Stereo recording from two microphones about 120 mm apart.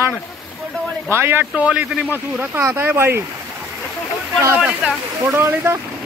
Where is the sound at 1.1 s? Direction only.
20° right (ahead or behind).